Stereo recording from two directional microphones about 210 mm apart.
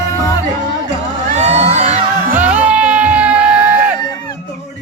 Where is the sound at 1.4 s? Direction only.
30° right (ahead or behind).